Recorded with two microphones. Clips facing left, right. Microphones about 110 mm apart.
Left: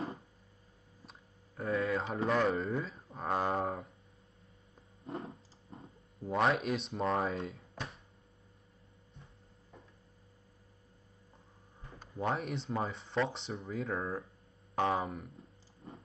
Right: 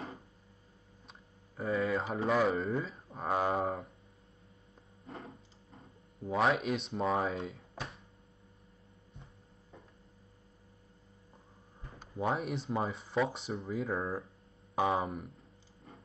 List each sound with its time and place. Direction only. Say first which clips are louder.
1.6 s speech: right 1 dB; centre (ahead or behind)
5.0 s a sound: left 5 dB; 30° left (ahead or behind)
6.2 s speech: right 1 dB; centre (ahead or behind)
12.0 s speech: right 1 dB; 5° right (ahead or behind)